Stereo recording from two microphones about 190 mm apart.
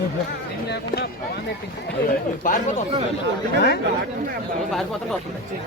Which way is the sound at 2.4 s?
45° left (ahead or behind).